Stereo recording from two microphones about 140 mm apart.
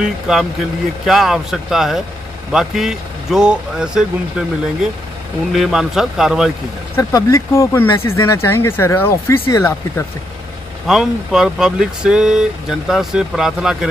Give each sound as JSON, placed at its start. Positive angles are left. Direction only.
{"t": 0.0, "sound": "speech", "side_deg": 0}
{"t": 5.5, "sound": "speech", "side_deg": 0}
{"t": 7.0, "sound": "speech", "side_deg": 25}
{"t": 10.9, "sound": "speech", "side_deg": 0}